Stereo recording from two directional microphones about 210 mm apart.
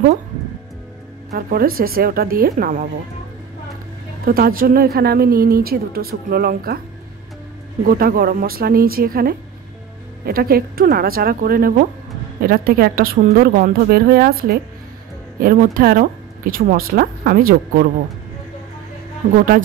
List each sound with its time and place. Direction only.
1.3 s a woman's voice: 45° right (ahead or behind)
4.3 s a woman's voice: 45° right (ahead or behind)
7.8 s a woman's voice: 45° right (ahead or behind)
19.3 s a woman's voice: 45° right (ahead or behind)